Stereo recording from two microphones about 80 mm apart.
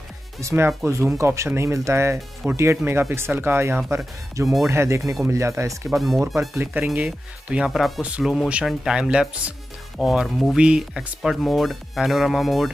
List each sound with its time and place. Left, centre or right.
0.4 s speech: right
5.9 s speech: centre
6.6 s speech: right
7.4 s speech: centre